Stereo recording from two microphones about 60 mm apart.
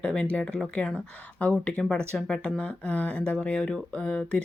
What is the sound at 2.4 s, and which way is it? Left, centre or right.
Speech, centre.